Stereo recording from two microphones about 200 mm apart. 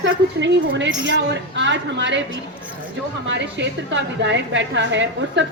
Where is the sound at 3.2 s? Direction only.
65° right (ahead or behind).